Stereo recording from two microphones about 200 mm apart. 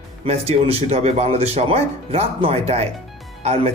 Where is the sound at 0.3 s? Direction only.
30° right (ahead or behind).